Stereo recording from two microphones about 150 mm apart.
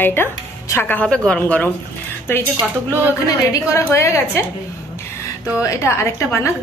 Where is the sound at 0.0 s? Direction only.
15° left (ahead or behind).